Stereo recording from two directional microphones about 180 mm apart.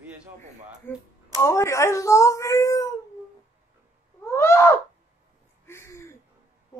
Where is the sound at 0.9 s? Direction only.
10° left (ahead or behind).